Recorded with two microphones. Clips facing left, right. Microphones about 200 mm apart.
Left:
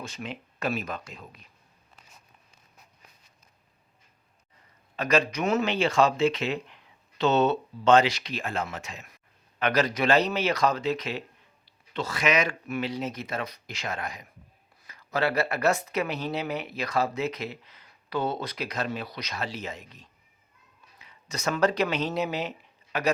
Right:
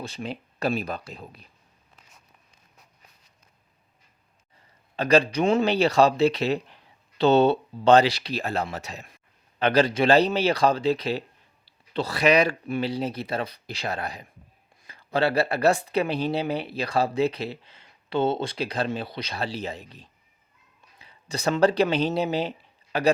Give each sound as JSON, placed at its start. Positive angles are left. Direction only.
{"t": 0.0, "sound": "speech", "side_deg": -35}
{"t": 4.9, "sound": "speech", "side_deg": -30}